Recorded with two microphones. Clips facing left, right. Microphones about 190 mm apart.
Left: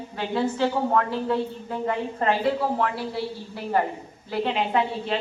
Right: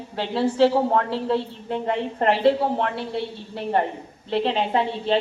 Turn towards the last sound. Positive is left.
turn(degrees=-30)  # may be behind; listen again after turning